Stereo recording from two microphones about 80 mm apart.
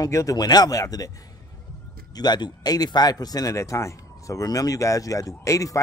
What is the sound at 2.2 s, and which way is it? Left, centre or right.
A man's voice, left.